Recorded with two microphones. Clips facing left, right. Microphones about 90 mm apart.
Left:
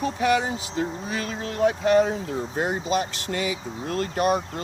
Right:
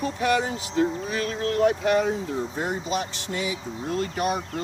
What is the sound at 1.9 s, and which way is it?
Speech, 40° left (ahead or behind).